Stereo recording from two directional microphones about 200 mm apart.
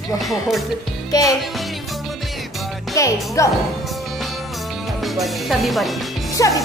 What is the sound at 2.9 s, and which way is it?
Speech, 15° left (ahead or behind).